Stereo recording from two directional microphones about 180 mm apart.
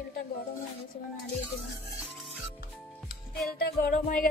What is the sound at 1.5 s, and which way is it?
Music, centre (ahead or behind).